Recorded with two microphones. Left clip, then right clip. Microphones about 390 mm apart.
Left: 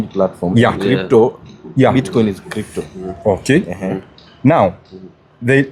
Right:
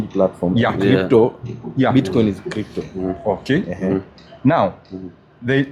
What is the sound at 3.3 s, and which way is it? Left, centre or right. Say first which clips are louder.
Speech: left 6 dB; left.